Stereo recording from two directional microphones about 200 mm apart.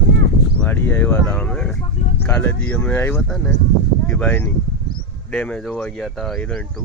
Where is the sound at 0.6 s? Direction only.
10° left (ahead or behind).